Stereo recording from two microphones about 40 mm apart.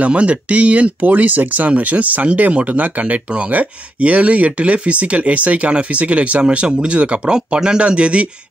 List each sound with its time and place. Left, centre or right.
0.0 s speech: right
7.3 s speech: centre